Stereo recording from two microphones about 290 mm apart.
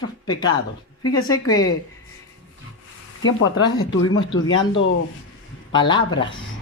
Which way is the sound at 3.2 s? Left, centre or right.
Left.